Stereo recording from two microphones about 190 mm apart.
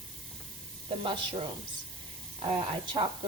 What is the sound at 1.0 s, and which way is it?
Speech, 25° right (ahead or behind).